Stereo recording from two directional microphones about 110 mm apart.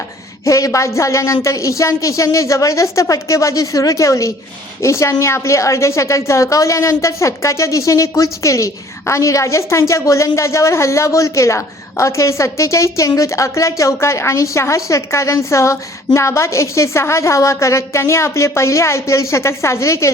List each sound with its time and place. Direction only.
0.4 s a woman's voice: 30° left (ahead or behind)